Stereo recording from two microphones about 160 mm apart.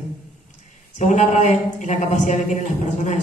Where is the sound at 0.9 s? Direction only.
45° left (ahead or behind).